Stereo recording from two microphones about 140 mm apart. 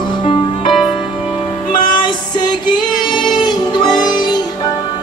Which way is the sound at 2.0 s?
30° left (ahead or behind).